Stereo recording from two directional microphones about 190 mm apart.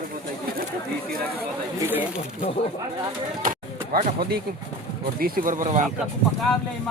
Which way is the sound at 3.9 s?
55° right (ahead or behind).